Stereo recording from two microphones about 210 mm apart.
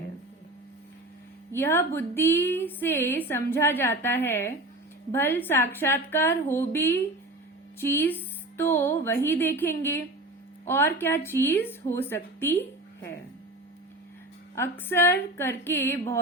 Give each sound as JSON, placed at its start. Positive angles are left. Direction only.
{"t": 1.5, "sound": "a woman's voice", "side_deg": 10}
{"t": 14.5, "sound": "a woman's voice", "side_deg": 10}